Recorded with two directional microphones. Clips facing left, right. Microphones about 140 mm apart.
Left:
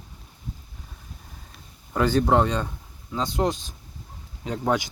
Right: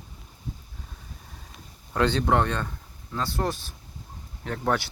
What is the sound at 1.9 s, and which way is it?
Speech, 10° left (ahead or behind).